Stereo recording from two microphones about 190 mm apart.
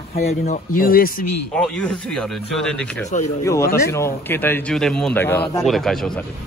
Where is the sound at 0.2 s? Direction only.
40° left (ahead or behind).